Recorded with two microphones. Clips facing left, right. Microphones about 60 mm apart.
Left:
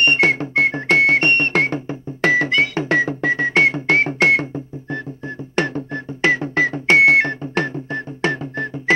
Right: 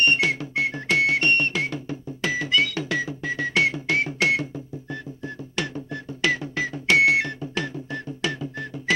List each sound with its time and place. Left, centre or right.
0.0 s music: left
3.0 s music: left